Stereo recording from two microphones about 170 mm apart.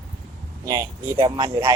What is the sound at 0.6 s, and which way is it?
Speech, 20° right (ahead or behind).